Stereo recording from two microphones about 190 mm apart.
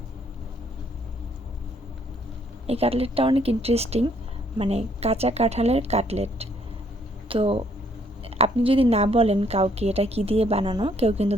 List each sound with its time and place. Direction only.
2.6 s a woman's voice: 30° right (ahead or behind)